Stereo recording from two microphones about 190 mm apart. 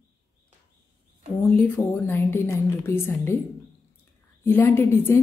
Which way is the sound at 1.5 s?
10° left (ahead or behind).